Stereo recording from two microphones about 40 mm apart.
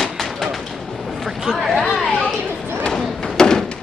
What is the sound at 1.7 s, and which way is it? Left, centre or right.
Chatter, centre.